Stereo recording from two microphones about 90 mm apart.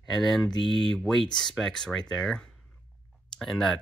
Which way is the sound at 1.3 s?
55° left (ahead or behind).